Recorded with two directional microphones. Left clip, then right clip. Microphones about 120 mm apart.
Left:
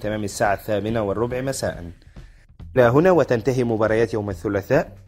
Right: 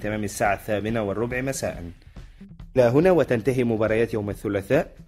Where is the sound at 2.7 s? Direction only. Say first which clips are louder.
Left 3 dB; 5° left (ahead or behind).